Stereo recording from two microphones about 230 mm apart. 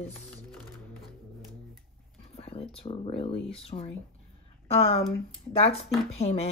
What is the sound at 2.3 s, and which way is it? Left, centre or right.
Speech, left.